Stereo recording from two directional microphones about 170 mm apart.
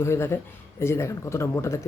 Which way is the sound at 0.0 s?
15° left (ahead or behind).